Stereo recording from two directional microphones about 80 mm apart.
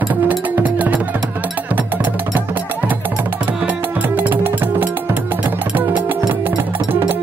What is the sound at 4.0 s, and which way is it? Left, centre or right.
Music, right.